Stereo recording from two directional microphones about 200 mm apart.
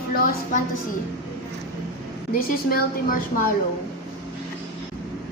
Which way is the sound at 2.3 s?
45° left (ahead or behind).